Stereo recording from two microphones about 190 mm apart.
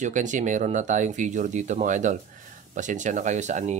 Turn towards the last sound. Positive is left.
turn(degrees=-40)  # may be behind; listen again after turning